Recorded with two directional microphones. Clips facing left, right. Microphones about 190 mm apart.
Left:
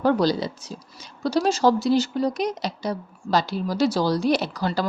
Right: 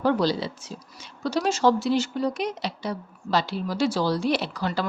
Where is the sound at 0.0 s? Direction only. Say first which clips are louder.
Left 2 dB; 45° left (ahead or behind).